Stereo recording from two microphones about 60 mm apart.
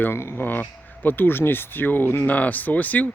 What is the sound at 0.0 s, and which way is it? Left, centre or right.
Speech, left.